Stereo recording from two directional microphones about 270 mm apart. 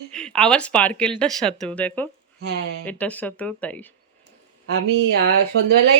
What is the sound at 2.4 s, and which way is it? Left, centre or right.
Speech, right.